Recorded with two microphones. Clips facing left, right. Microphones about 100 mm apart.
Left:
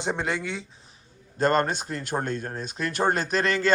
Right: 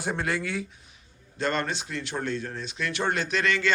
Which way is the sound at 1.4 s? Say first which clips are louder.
Left 6 dB; 45° left (ahead or behind).